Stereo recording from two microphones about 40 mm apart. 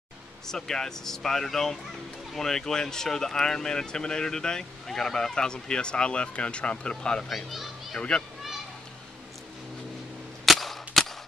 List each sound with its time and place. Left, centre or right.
0.5 s speech: centre
7.2 s a child's voice: centre
10.4 s cap gun: centre